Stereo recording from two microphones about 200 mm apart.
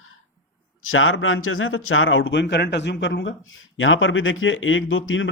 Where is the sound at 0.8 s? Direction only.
85° left.